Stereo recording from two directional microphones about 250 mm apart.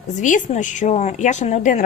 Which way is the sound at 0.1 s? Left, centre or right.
Left.